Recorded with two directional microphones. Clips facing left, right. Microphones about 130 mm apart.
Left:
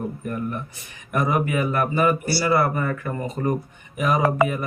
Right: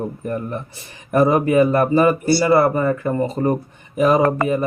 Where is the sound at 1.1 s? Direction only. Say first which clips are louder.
Right 8 dB; 35° right (ahead or behind).